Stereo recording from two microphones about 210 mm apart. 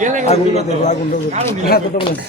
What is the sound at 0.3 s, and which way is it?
Speech, 30° left (ahead or behind).